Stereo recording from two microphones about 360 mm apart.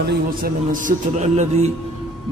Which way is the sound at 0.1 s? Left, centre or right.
Right.